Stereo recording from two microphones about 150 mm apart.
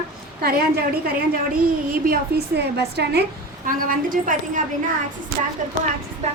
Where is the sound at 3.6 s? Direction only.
65° right (ahead or behind).